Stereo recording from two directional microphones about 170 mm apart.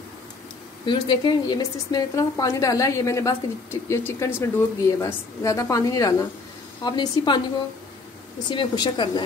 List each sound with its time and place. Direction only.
0.8 s a woman's voice: 25° left (ahead or behind)
8.5 s a woman's voice: 25° left (ahead or behind)